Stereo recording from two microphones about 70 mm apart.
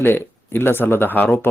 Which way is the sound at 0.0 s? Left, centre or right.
Left.